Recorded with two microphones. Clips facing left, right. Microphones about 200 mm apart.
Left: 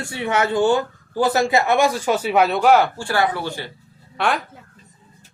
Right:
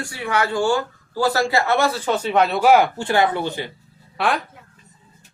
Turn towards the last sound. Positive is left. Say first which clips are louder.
# even
turn(degrees=0)  # may be behind; listen again after turning